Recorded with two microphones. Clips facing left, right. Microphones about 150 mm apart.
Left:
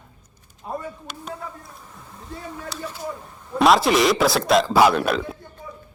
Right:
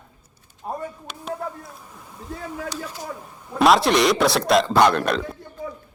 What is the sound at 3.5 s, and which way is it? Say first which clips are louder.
A man's voice: even; centre (ahead or behind).